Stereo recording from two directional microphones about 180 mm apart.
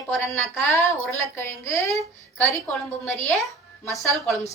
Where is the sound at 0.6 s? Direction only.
15° left (ahead or behind).